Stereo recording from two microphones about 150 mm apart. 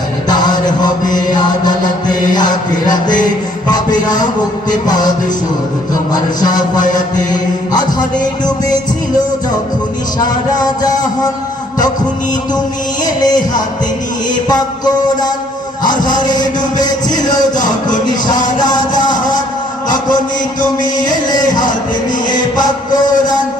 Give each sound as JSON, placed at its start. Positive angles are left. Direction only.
{"t": 0.3, "sound": "music", "side_deg": 25}
{"t": 2.9, "sound": "speech", "side_deg": 60}
{"t": 3.2, "sound": "music", "side_deg": 25}
{"t": 4.7, "sound": "speech", "side_deg": 25}
{"t": 6.4, "sound": "speech", "side_deg": 25}
{"t": 7.7, "sound": "music", "side_deg": 25}
{"t": 10.2, "sound": "speech", "side_deg": 25}
{"t": 13.1, "sound": "speech", "side_deg": 25}
{"t": 14.4, "sound": "speech", "side_deg": 25}
{"t": 17.6, "sound": "speech", "side_deg": 55}
{"t": 18.1, "sound": "speech", "side_deg": 25}
{"t": 21.2, "sound": "speech", "side_deg": 25}